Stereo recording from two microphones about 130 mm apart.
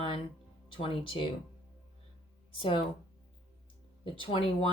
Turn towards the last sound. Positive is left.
turn(degrees=45)  # may be behind; listen again after turning